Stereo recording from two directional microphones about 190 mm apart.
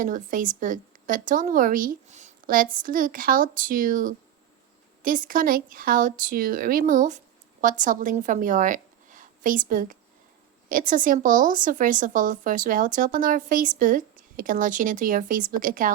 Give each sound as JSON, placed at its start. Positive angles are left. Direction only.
{"t": 0.0, "sound": "a woman's voice", "side_deg": -45}